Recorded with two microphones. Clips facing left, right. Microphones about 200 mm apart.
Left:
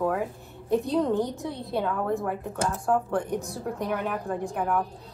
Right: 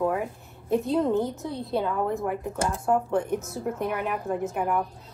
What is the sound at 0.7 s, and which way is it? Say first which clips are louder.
Speech: even; centre (ahead or behind).